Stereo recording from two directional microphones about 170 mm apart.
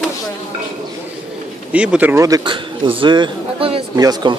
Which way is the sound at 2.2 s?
25° right (ahead or behind).